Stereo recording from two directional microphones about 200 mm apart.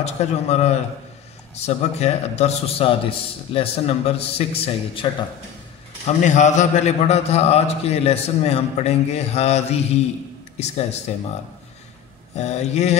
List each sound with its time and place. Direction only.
0.0 s a man's voice: 35° left (ahead or behind)
6.2 s a man's voice: 35° left (ahead or behind)
12.4 s a man's voice: 35° left (ahead or behind)